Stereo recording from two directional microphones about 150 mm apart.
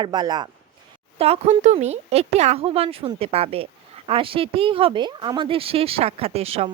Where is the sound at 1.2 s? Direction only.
45° right (ahead or behind).